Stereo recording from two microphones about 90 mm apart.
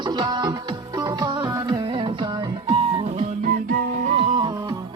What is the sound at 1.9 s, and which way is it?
Music, 65° right (ahead or behind).